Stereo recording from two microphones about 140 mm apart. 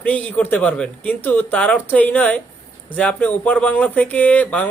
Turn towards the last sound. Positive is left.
turn(degrees=10)  # may be behind; listen again after turning